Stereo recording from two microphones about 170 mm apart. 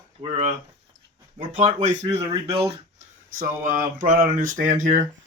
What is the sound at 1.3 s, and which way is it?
Speech, 45° right (ahead or behind).